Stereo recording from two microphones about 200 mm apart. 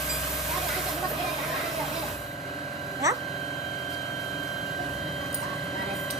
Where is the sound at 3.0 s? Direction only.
15° right (ahead or behind).